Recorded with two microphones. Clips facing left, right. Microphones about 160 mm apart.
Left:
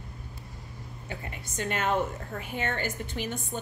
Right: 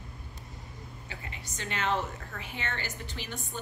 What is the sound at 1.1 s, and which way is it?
A woman's voice, 50° left (ahead or behind).